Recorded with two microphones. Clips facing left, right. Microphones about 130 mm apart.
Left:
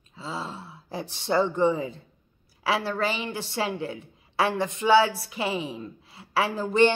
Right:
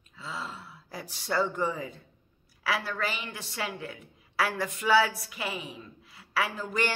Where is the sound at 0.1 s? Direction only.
30° left (ahead or behind).